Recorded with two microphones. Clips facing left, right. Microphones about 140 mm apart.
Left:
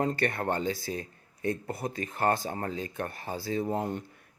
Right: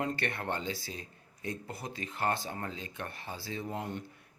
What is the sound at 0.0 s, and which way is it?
Speech, 40° left (ahead or behind).